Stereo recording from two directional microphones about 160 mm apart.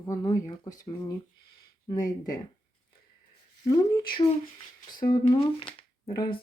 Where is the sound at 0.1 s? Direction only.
20° left (ahead or behind).